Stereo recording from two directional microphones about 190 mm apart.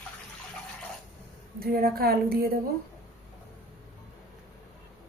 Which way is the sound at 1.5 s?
55° right (ahead or behind).